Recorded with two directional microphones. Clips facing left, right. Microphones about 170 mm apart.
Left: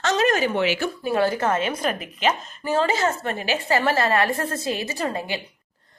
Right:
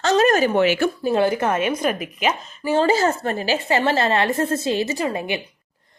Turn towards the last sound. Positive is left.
turn(degrees=-20)  # may be behind; listen again after turning